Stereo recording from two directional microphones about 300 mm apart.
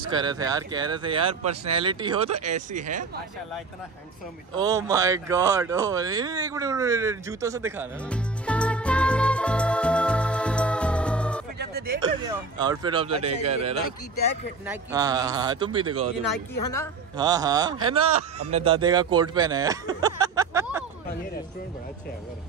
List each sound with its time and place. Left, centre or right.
0.1 s speech: centre
1.4 s speech: right
1.7 s speech: centre
4.6 s speech: centre
8.1 s music: centre
11.5 s music: right
12.0 s speech: centre
14.7 s speech: centre
17.2 s speech: centre
18.0 s speech: right
18.5 s speech: centre